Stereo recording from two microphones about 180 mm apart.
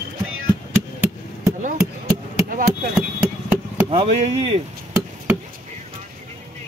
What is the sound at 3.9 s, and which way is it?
Speech, 30° right (ahead or behind).